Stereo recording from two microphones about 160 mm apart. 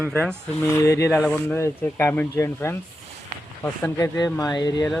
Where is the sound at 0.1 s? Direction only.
10° left (ahead or behind).